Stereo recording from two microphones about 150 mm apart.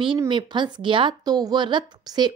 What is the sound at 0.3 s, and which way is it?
A woman's voice, 30° right (ahead or behind).